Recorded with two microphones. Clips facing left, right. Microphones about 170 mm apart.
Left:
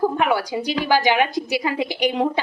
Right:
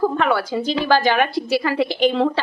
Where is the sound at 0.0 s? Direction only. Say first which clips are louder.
Right 1 dB; 15° left (ahead or behind).